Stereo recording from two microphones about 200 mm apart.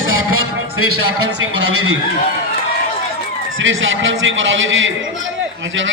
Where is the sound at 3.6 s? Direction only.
75° right (ahead or behind).